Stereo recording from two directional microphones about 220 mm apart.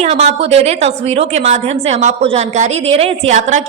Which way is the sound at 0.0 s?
30° right (ahead or behind).